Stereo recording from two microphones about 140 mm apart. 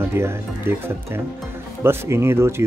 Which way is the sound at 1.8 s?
15° right (ahead or behind).